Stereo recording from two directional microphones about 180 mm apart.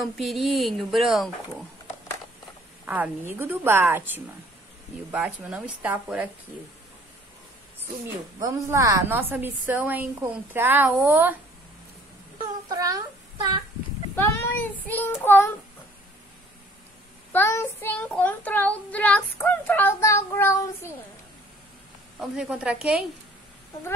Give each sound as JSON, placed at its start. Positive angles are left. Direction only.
{"t": 0.0, "sound": "a woman's voice", "side_deg": 0}
{"t": 2.8, "sound": "a woman's voice", "side_deg": -10}
{"t": 8.4, "sound": "a woman's voice", "side_deg": -20}
{"t": 12.6, "sound": "a sound", "side_deg": -20}
{"t": 14.1, "sound": "speech", "side_deg": 10}
{"t": 15.2, "sound": "child singing", "side_deg": 10}
{"t": 17.3, "sound": "child singing", "side_deg": 15}
{"t": 22.2, "sound": "a woman's voice", "side_deg": -5}